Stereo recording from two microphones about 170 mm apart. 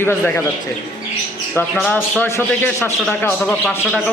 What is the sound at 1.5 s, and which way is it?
Speech, centre (ahead or behind).